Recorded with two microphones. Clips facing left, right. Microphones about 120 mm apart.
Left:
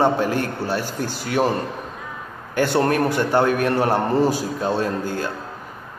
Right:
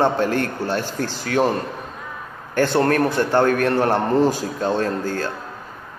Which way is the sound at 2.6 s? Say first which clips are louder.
Right 1 dB; 15° left (ahead or behind).